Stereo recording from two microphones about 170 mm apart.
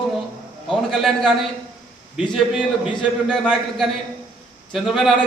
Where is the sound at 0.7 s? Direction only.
Centre (ahead or behind).